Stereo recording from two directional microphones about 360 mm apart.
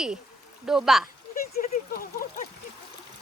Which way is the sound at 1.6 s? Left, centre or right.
Left.